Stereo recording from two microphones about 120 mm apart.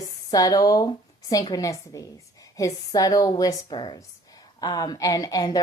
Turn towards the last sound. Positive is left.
turn(degrees=35)  # may be behind; listen again after turning